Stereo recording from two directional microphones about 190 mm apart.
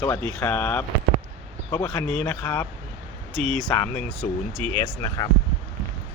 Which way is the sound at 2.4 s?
20° left (ahead or behind).